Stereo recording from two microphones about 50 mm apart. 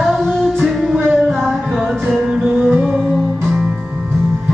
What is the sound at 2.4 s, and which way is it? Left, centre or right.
Music, right.